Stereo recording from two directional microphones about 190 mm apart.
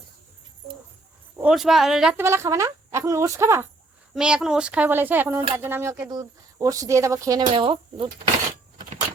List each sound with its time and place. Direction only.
1.4 s speech: 5° right (ahead or behind)
2.2 s a woman's voice: 15° right (ahead or behind)
7.5 s speech: 30° right (ahead or behind)